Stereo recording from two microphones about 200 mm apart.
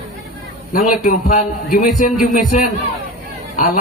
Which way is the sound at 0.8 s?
40° left (ahead or behind).